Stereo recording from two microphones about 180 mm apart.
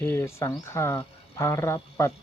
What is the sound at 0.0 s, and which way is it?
Speech, 15° left (ahead or behind).